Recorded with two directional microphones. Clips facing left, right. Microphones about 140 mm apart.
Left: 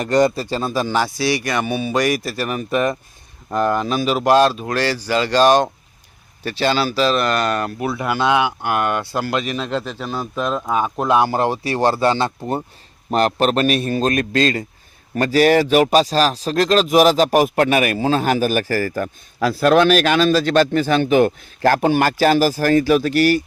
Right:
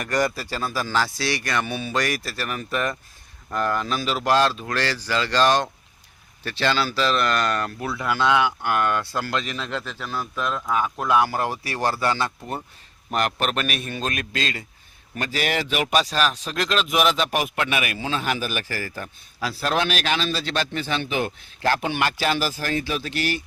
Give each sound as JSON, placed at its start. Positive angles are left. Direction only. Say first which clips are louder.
{"t": 0.0, "sound": "a man's voice", "louder": "left 8 dB", "side_deg": 25}